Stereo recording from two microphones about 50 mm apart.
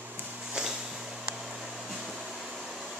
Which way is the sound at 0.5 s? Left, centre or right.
Centre.